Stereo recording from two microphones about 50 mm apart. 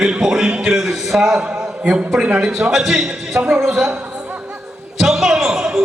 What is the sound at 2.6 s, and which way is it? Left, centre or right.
A man's voice, centre.